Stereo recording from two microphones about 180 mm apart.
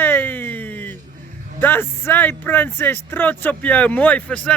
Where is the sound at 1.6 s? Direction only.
10° left (ahead or behind).